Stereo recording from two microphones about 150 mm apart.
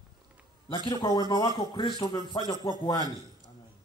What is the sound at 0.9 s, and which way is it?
Speech, 30° left (ahead or behind).